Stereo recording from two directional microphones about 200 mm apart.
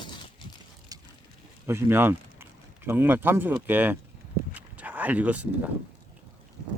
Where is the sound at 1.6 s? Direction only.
10° right (ahead or behind).